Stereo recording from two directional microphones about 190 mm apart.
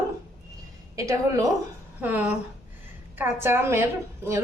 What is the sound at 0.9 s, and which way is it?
A woman's voice, 15° right (ahead or behind).